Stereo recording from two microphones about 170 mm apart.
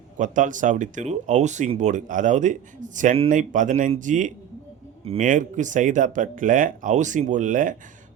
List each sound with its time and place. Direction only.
0.2 s speech: 50° right (ahead or behind)